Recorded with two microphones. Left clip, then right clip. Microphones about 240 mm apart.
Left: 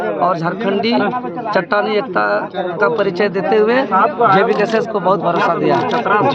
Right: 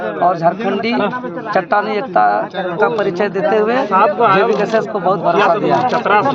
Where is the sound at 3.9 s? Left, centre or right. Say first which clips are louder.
Right 1 dB; right.